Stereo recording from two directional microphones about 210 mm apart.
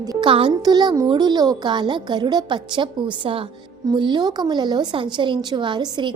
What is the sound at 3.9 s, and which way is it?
A woman's voice, 20° right (ahead or behind).